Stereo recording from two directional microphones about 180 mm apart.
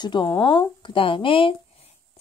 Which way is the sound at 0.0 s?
25° left (ahead or behind).